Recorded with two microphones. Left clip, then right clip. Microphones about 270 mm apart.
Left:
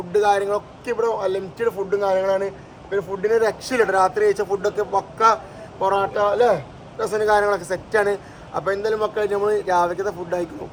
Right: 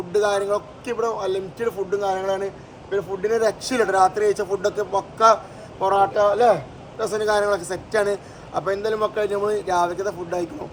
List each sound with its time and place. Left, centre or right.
0.1 s a man's voice: centre